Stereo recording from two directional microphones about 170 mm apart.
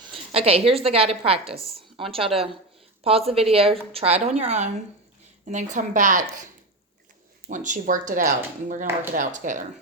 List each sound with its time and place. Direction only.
0.0 s a woman's voice: 35° right (ahead or behind)
7.5 s speech: 50° right (ahead or behind)